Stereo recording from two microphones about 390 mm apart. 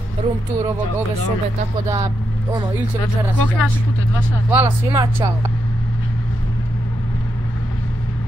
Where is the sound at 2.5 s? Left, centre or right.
Centre.